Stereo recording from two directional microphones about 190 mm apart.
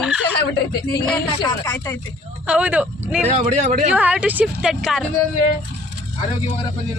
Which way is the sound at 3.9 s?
5° right (ahead or behind).